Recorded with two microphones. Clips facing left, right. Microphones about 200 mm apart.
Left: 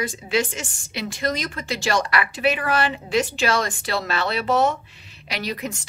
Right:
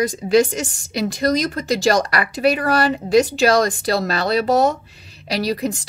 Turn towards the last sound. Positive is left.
turn(degrees=-35)  # may be behind; listen again after turning